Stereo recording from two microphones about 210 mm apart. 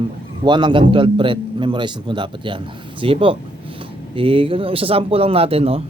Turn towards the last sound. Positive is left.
turn(degrees=-30)  # may be behind; listen again after turning